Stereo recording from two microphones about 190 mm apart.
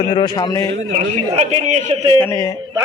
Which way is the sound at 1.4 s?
35° right (ahead or behind).